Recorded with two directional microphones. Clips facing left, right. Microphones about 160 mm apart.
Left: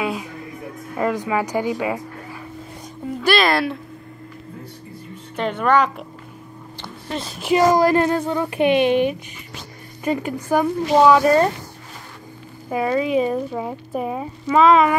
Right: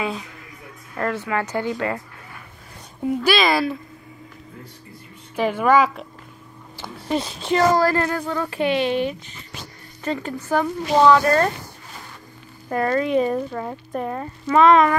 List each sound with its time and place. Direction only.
0.0 s a woman's voice: 5° left (ahead or behind)
3.2 s speech: centre (ahead or behind)
5.3 s speech: 5° right (ahead or behind)
6.8 s a sound: 10° right (ahead or behind)
7.3 s a woman's voice: 10° left (ahead or behind)
12.6 s speech: 5° left (ahead or behind)